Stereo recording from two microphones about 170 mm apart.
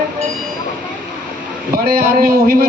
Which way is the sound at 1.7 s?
60° right (ahead or behind).